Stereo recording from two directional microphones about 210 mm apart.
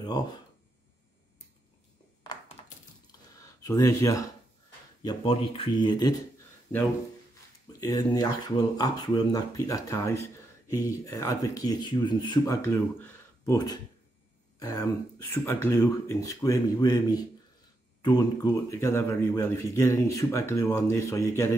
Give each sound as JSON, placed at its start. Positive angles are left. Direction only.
{"t": 0.0, "sound": "speech", "side_deg": 20}
{"t": 2.6, "sound": "a sound", "side_deg": 20}
{"t": 5.0, "sound": "speech", "side_deg": 25}
{"t": 7.8, "sound": "speech", "side_deg": 20}